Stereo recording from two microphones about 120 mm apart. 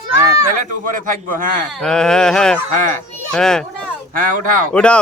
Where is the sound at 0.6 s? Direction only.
90° right.